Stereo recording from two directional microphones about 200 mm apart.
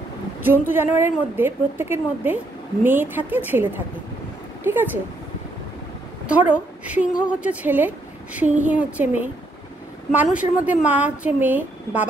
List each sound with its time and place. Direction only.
0.4 s a woman's voice: 10° right (ahead or behind)
6.9 s a woman's voice: 5° right (ahead or behind)
10.1 s a woman's voice: 5° right (ahead or behind)